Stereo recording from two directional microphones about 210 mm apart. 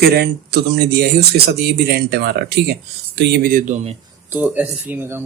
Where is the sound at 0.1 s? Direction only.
50° right (ahead or behind).